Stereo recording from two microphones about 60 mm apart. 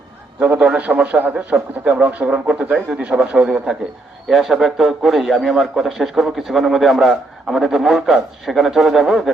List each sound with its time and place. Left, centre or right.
0.5 s a man's voice: centre
2.9 s a man's voice: centre
4.3 s a man's voice: centre